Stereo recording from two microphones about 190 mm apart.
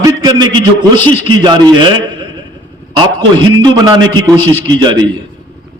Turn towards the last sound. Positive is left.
turn(degrees=-20)  # may be behind; listen again after turning